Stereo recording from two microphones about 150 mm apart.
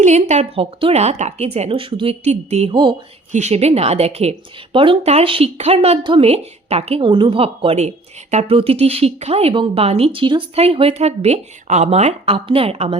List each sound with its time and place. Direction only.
0.0 s a woman's voice: 50° right (ahead or behind)